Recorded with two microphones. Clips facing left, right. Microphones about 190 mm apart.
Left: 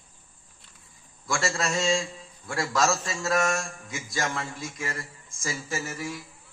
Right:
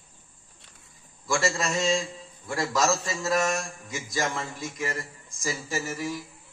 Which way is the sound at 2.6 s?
20° right (ahead or behind).